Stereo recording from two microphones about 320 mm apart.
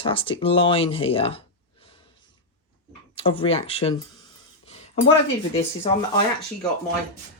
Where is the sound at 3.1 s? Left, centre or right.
Centre.